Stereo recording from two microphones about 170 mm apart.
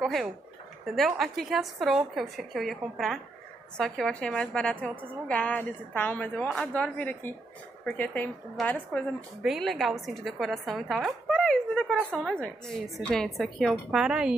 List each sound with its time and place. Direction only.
0.0 s a woman's voice: centre (ahead or behind)